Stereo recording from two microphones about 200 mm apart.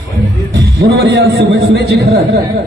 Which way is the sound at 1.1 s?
55° right (ahead or behind).